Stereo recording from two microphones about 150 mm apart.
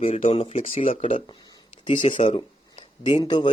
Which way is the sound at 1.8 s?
35° left (ahead or behind).